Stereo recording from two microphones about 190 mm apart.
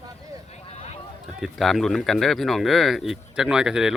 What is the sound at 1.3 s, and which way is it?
Speech, centre (ahead or behind).